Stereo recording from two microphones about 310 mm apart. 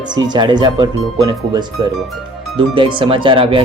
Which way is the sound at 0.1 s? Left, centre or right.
Centre.